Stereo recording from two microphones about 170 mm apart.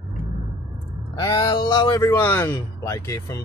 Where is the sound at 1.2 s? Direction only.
25° left (ahead or behind).